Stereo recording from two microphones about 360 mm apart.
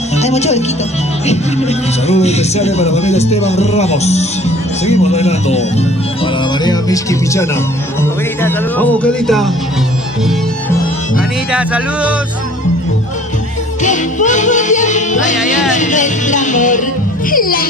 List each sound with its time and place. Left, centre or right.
0.1 s speech: centre
2.0 s speech: centre
6.6 s speech: centre
8.0 s music: centre
11.1 s speech: centre
13.8 s music: centre